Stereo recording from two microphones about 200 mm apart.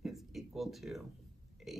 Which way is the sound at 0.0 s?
Centre (ahead or behind).